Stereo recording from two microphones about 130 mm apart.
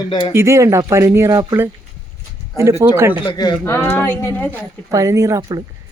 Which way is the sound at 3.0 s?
15° right (ahead or behind).